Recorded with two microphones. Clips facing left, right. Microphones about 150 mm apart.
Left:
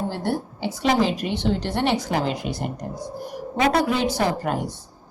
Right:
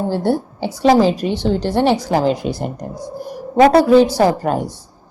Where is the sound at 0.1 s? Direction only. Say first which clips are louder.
Right 8 dB; 35° right (ahead or behind).